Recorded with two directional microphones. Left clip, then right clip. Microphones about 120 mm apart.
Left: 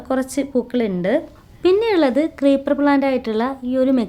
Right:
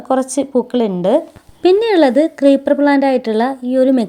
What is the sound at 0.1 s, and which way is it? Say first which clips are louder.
A woman's voice: right 5 dB; 15° right (ahead or behind).